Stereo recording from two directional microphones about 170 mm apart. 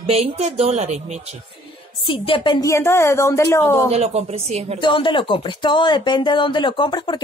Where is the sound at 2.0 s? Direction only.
30° left (ahead or behind).